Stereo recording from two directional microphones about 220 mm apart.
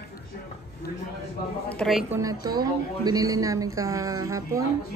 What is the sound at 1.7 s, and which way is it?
Speech, centre (ahead or behind).